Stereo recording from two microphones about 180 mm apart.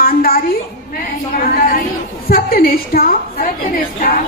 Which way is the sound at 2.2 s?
55° left (ahead or behind).